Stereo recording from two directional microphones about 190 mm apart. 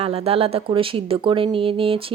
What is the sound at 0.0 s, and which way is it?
Speech, 30° right (ahead or behind).